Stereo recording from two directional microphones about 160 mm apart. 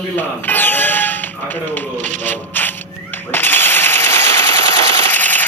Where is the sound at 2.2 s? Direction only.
10° left (ahead or behind).